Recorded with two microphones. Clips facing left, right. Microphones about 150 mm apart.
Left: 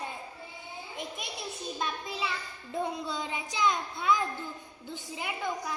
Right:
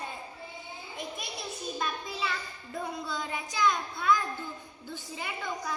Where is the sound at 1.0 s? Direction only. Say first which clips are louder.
Right 1 dB; 20° left (ahead or behind).